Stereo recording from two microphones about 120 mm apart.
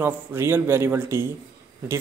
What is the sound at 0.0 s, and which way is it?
Speech, 20° right (ahead or behind).